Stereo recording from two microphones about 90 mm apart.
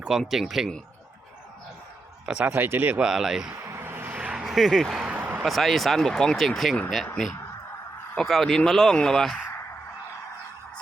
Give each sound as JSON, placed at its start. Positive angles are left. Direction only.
{"t": 0.0, "sound": "speech", "side_deg": -5}
{"t": 2.2, "sound": "speech", "side_deg": -10}
{"t": 2.5, "sound": "speech", "side_deg": -20}
{"t": 3.1, "sound": "speech", "side_deg": -5}
{"t": 3.5, "sound": "a sound", "side_deg": -25}
{"t": 4.4, "sound": "speech", "side_deg": 0}
{"t": 5.0, "sound": "a sound", "side_deg": -20}
{"t": 5.4, "sound": "speech", "side_deg": 0}
{"t": 7.0, "sound": "speech", "side_deg": 10}
{"t": 8.2, "sound": "speech", "side_deg": 0}